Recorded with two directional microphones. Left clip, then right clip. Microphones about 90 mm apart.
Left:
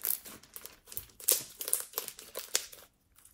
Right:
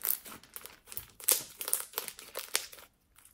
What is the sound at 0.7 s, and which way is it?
Crumpling, 30° right (ahead or behind).